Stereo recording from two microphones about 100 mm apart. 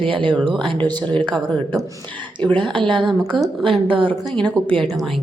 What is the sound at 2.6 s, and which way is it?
A woman's voice, 55° right (ahead or behind).